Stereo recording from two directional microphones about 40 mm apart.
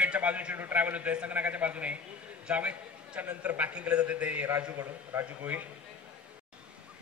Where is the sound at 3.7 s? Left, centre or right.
Right.